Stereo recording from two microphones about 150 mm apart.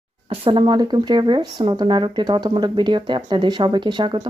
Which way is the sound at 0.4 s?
35° right (ahead or behind).